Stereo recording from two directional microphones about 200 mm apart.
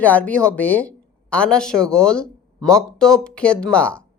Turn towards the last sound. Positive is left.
turn(degrees=5)  # may be behind; listen again after turning